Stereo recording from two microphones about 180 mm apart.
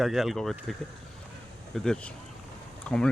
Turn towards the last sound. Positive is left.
turn(degrees=5)  # may be behind; listen again after turning